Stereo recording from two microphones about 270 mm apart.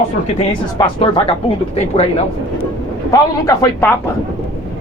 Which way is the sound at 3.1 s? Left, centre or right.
Centre.